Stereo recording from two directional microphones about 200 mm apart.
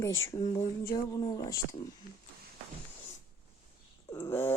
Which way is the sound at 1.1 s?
20° left (ahead or behind).